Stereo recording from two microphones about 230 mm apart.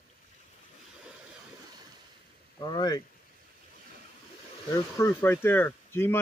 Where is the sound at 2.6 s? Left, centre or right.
Centre.